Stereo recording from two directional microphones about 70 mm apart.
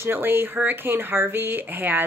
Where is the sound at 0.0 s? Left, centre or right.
Right.